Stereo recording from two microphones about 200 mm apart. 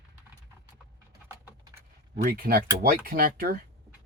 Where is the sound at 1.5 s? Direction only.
15° right (ahead or behind).